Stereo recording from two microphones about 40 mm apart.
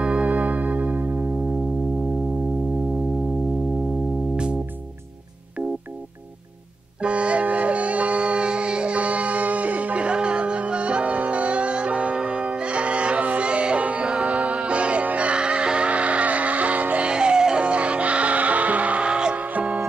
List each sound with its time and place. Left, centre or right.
0.0 s organ: right
1.0 s music: right
7.0 s music: right
19.3 s music: right